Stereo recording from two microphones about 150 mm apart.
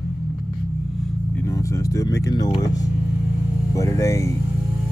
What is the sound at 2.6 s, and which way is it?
Music, 25° left (ahead or behind).